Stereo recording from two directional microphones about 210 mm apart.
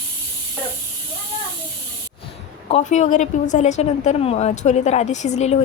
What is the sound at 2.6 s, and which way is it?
A woman's voice, 30° left (ahead or behind).